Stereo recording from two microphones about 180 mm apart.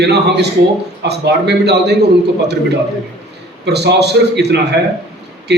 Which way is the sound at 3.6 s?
65° right (ahead or behind).